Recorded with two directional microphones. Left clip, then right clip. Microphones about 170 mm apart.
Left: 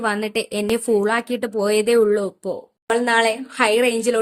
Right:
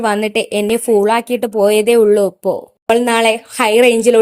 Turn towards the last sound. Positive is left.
turn(degrees=-25)  # may be behind; listen again after turning